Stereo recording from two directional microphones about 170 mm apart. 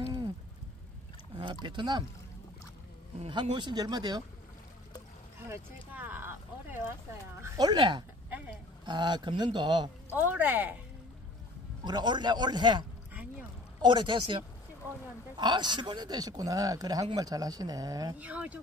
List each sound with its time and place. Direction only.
1.3 s speech: 25° right (ahead or behind)
3.2 s speech: 30° right (ahead or behind)
5.5 s a sound: 10° right (ahead or behind)
7.4 s speech: 25° right (ahead or behind)
8.3 s a sound: 10° right (ahead or behind)
8.8 s speech: 25° right (ahead or behind)
10.1 s speech: 10° right (ahead or behind)
11.8 s speech: 25° right (ahead or behind)
18.2 s speech: 10° right (ahead or behind)